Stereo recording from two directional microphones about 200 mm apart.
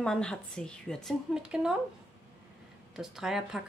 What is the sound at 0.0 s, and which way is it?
Speech, 5° left (ahead or behind).